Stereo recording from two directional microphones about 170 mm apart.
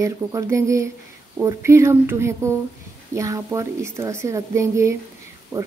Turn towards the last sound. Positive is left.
turn(degrees=-15)  # may be behind; listen again after turning